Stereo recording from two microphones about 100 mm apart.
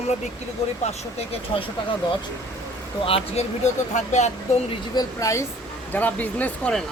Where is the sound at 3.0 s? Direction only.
75° left (ahead or behind).